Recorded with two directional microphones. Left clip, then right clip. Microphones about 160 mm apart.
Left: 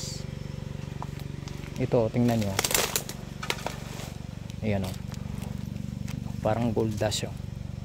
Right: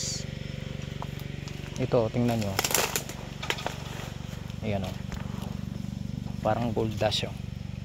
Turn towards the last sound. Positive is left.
turn(degrees=50)  # may be behind; listen again after turning